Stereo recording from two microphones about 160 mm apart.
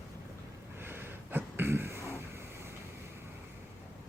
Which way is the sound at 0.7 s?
15° right (ahead or behind).